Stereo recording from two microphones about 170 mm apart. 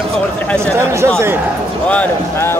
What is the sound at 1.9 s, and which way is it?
Speech, 10° left (ahead or behind).